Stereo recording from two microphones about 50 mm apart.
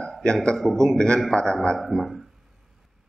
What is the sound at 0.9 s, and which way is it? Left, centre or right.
Speech, centre.